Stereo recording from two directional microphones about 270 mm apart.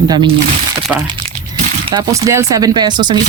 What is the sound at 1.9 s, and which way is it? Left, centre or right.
Speech, centre.